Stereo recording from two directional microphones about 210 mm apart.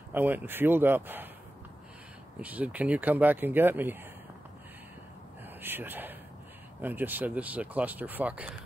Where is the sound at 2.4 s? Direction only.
5° right (ahead or behind).